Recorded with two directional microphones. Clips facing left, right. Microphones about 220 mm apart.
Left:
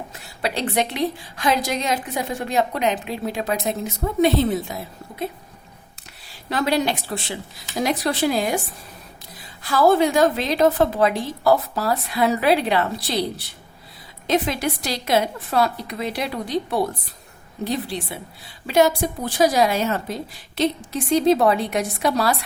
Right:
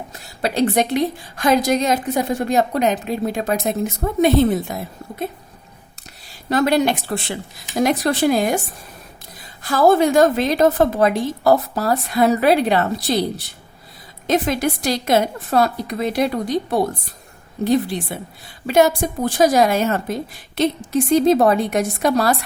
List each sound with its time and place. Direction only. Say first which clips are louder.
0.1 s a woman's voice: right 4 dB; 40° right (ahead or behind)
6.2 s a woman's voice: right 5 dB; 45° right (ahead or behind)
9.6 s a woman's voice: right 2 dB; 45° right (ahead or behind)
14.3 s a woman's voice: right 3 dB; 45° right (ahead or behind)